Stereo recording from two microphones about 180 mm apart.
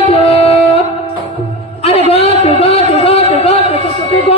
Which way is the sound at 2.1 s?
35° left (ahead or behind).